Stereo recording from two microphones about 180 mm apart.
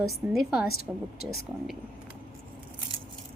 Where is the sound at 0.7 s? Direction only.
55° left (ahead or behind).